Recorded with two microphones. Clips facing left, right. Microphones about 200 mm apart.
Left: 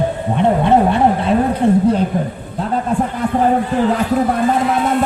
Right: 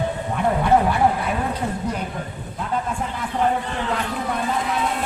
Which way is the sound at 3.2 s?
45° left (ahead or behind).